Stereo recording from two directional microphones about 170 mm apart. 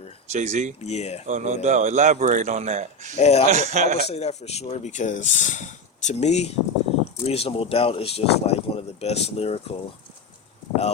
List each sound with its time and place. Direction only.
0.3 s a man's voice: 45° right (ahead or behind)
0.8 s speech: 40° left (ahead or behind)
1.3 s a man's voice: 45° right (ahead or behind)
3.2 s speech: 40° left (ahead or behind)
3.5 s a man's voice: 45° right (ahead or behind)
4.1 s speech: 40° left (ahead or behind)